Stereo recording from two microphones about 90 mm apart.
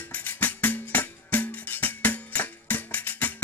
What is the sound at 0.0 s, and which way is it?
Music, 20° left (ahead or behind).